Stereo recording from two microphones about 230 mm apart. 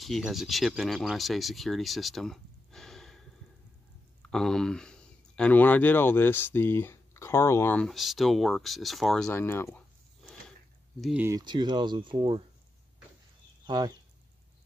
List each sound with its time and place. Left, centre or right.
0.0 s speech: centre
11.0 s speech: centre
11.2 s speech: centre
13.7 s speech: centre